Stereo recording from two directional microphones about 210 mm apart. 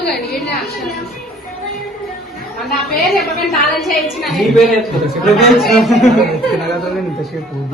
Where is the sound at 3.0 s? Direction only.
Centre (ahead or behind).